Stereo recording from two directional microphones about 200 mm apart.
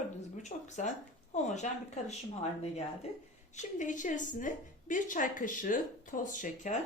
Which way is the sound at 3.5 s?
40° left (ahead or behind).